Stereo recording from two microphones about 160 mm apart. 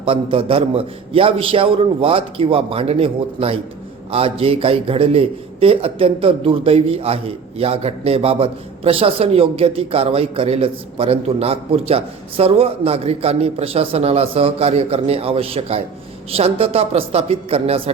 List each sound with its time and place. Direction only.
0.0 s a man's voice: 35° right (ahead or behind)